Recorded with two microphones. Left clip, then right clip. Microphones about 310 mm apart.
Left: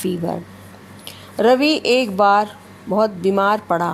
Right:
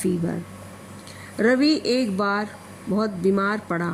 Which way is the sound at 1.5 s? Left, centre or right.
Left.